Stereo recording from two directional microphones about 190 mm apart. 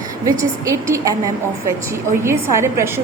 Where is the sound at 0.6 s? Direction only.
15° right (ahead or behind).